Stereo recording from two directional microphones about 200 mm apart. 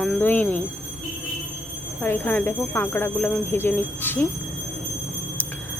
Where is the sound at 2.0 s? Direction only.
10° left (ahead or behind).